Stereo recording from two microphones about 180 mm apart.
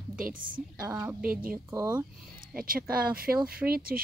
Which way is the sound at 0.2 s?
50° right (ahead or behind).